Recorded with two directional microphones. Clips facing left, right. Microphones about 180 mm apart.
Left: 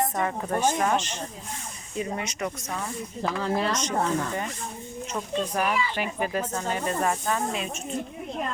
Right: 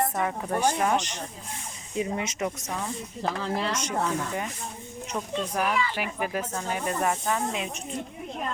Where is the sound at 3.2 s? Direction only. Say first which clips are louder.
Left 3 dB; 45° left (ahead or behind).